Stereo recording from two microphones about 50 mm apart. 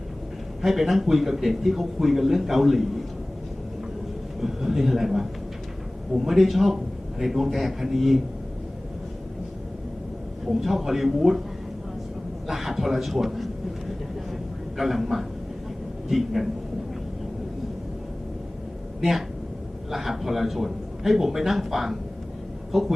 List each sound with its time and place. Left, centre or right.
0.6 s speech: centre
4.4 s a man's voice: centre
10.4 s speech: centre
12.5 s speech: centre
14.8 s speech: centre
19.9 s speech: centre